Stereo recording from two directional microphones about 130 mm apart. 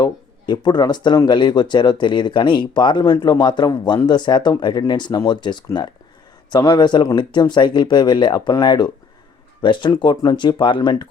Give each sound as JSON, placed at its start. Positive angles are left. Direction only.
{"t": 0.0, "sound": "speech", "side_deg": 35}